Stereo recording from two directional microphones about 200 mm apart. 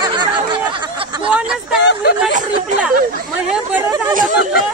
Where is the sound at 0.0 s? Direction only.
20° right (ahead or behind).